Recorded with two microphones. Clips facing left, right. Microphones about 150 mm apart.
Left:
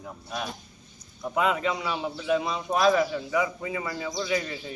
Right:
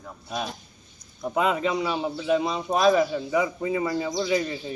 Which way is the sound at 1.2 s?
25° right (ahead or behind).